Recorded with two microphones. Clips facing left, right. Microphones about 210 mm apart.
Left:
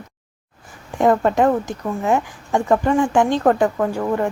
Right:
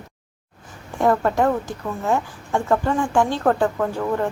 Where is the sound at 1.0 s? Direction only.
20° left (ahead or behind).